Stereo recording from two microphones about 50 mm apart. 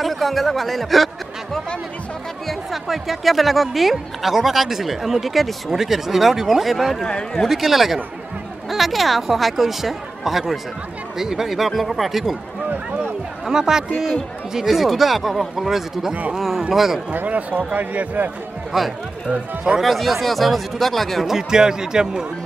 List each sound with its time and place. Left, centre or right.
0.0 s speech: centre
7.1 s speech: centre
7.4 s speech: centre
13.5 s speech: centre
17.1 s speech: right
18.7 s speech: centre
19.9 s speech: centre
21.4 s speech: centre